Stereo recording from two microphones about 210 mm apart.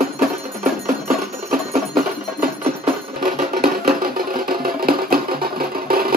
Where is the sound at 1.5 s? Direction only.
45° right (ahead or behind).